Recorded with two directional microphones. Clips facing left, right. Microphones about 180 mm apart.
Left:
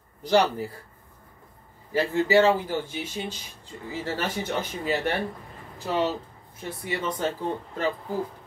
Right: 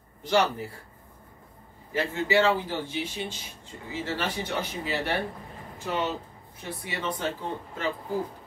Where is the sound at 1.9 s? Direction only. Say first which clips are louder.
Left 4 dB; 40° left (ahead or behind).